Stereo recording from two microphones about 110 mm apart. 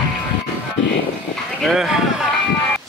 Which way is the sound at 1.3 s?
Centre (ahead or behind).